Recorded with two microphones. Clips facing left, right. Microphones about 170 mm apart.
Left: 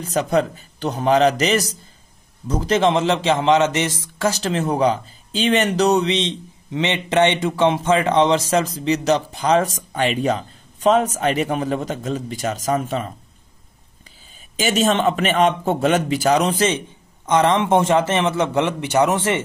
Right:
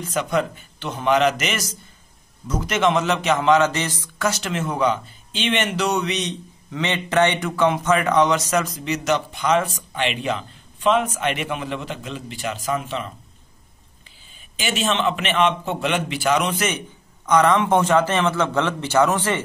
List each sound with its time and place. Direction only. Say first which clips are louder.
0.0 s a man's voice: left 3 dB; 35° left (ahead or behind)
4.2 s speech: left 3 dB; 35° left (ahead or behind)
14.6 s speech: left 5 dB; 40° left (ahead or behind)
17.3 s a man's voice: left 1 dB; 25° left (ahead or behind)